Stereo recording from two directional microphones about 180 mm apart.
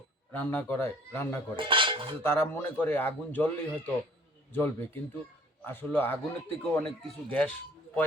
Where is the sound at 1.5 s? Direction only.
30° right (ahead or behind).